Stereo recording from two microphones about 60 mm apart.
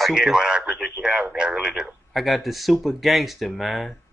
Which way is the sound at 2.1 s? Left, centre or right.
Centre.